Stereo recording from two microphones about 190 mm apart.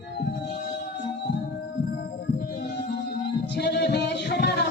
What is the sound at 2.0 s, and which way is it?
Music, 60° left (ahead or behind).